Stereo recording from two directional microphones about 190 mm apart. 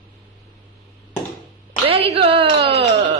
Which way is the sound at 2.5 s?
60° right (ahead or behind).